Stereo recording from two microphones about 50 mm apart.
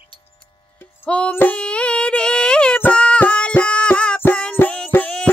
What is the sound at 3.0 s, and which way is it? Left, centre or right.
Music, left.